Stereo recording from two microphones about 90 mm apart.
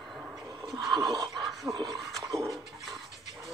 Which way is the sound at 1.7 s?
45° right (ahead or behind).